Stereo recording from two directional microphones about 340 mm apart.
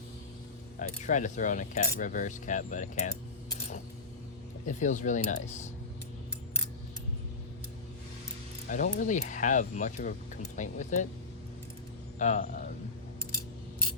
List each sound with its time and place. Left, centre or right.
0.8 s speech: left
4.6 s speech: left
8.6 s speech: left
12.2 s speech: left